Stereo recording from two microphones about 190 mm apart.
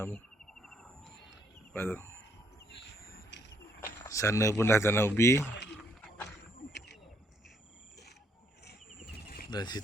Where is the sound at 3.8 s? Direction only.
15° left (ahead or behind).